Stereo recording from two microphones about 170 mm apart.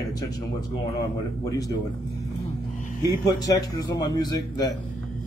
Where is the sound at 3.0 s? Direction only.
20° left (ahead or behind).